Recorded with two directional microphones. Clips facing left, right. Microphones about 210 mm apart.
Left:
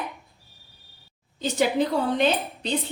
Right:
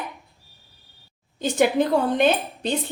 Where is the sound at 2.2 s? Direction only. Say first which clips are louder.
Right 3 dB; 50° right (ahead or behind).